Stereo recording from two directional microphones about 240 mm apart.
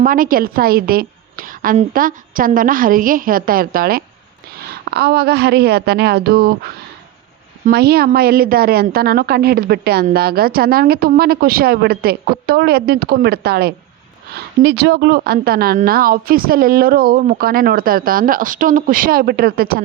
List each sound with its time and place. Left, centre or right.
0.0 s a woman's voice: right